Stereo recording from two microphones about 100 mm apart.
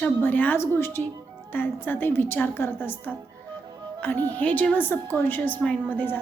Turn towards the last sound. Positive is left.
turn(degrees=20)  # may be behind; listen again after turning